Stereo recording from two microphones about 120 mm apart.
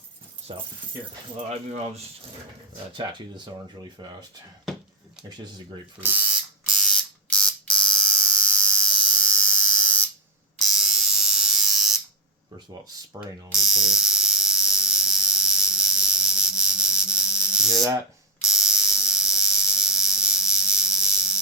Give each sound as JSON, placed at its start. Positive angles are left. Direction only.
{"t": 0.5, "sound": "speech", "side_deg": -45}
{"t": 1.5, "sound": "speech", "side_deg": -65}
{"t": 2.9, "sound": "speech", "side_deg": -40}
{"t": 6.0, "sound": "alarm", "side_deg": -15}
{"t": 10.6, "sound": "electric shaver", "side_deg": -5}
{"t": 13.5, "sound": "electric shaver", "side_deg": -5}